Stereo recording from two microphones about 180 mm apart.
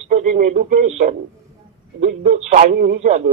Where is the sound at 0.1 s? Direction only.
40° right (ahead or behind).